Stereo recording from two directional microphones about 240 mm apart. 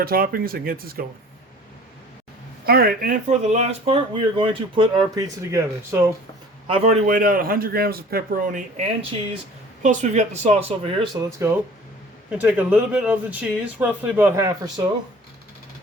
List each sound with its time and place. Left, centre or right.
0.0 s a man's voice: right
2.6 s speech: right; by 6.1 s centre
6.7 s a man's voice: right